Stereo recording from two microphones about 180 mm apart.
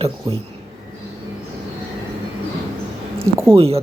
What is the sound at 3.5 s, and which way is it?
Speech, 35° right (ahead or behind).